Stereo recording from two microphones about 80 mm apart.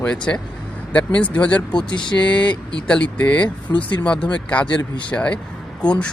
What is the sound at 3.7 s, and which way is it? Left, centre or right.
Speech, left.